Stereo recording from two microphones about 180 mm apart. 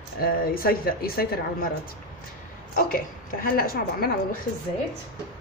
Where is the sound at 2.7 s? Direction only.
50° left (ahead or behind).